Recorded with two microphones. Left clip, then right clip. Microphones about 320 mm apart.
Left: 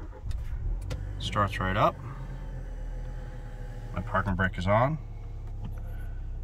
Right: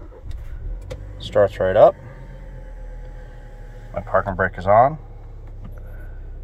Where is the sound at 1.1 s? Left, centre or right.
Centre.